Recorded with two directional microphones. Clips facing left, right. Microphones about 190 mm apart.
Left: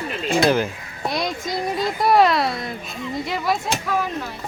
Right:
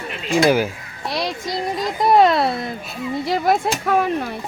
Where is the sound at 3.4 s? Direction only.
55° right (ahead or behind).